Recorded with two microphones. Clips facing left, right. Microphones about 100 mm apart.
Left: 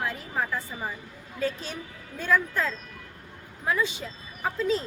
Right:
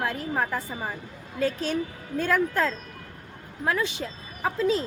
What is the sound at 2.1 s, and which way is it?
Speech, 65° right (ahead or behind).